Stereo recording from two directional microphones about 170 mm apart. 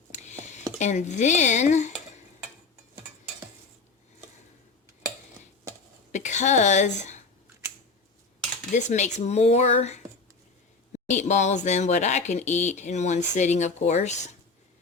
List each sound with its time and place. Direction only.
0.1 s a sound: 45° left (ahead or behind)
6.1 s a woman's voice: 45° left (ahead or behind)
8.7 s speech: 45° left (ahead or behind)